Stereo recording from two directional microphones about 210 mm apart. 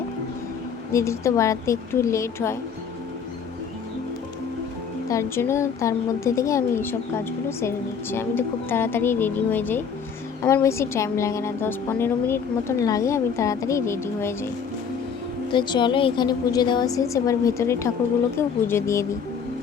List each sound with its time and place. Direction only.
0.9 s a woman's voice: 15° left (ahead or behind)
5.0 s a woman's voice: 15° left (ahead or behind)
8.1 s a woman's voice: 10° left (ahead or behind)